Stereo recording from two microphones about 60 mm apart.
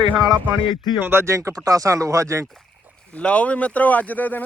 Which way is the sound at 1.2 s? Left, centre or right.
Right.